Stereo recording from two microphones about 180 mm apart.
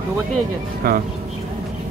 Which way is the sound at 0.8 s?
55° right (ahead or behind).